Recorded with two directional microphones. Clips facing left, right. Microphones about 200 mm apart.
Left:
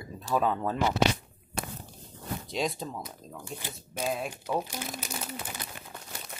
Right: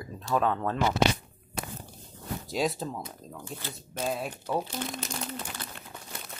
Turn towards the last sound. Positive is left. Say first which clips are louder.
# right 1 dB
turn(degrees=10)  # may be behind; listen again after turning